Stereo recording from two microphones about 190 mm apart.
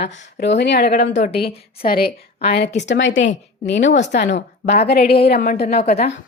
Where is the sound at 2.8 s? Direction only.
70° left (ahead or behind).